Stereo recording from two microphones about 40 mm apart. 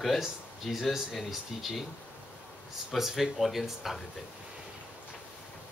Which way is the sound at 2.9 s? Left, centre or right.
Centre.